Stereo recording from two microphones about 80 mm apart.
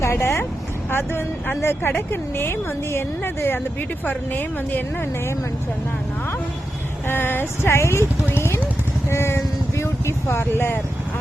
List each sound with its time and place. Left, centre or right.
0.0 s a woman's voice: left
7.1 s speech: left
9.0 s vehicle: left